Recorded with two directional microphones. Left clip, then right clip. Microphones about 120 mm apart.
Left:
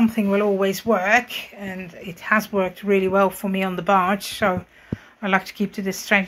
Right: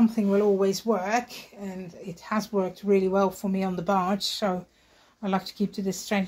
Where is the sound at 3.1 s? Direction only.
Centre (ahead or behind).